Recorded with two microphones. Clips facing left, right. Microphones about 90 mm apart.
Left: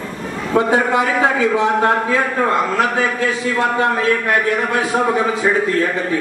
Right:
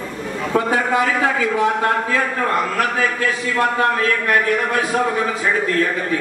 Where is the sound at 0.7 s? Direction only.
25° left (ahead or behind).